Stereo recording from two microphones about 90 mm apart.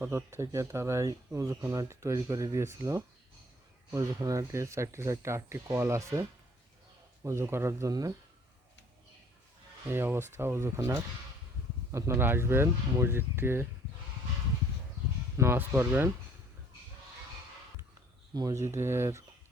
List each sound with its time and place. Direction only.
0.0 s speech: 30° right (ahead or behind)
7.3 s speech: 30° right (ahead or behind)
9.8 s speech: 25° right (ahead or behind)
15.4 s speech: 25° right (ahead or behind)
18.6 s speech: 30° right (ahead or behind)